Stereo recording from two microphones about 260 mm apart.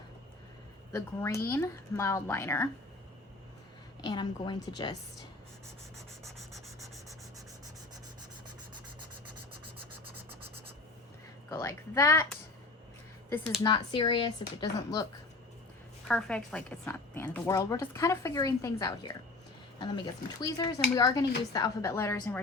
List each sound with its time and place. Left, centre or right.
0.9 s a woman's voice: centre
4.0 s a woman's voice: centre
6.2 s rub: centre
11.5 s a woman's voice: centre
16.0 s a woman's voice: centre